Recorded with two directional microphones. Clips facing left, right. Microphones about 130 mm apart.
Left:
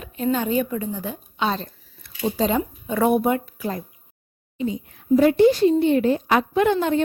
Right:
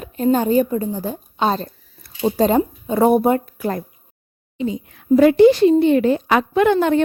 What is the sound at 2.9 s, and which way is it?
Speech, 35° right (ahead or behind).